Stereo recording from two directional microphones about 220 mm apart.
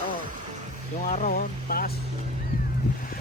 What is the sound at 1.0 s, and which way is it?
Speech, 35° left (ahead or behind).